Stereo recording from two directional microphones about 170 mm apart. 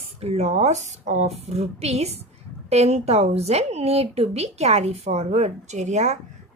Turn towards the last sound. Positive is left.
turn(degrees=-45)  # may be behind; listen again after turning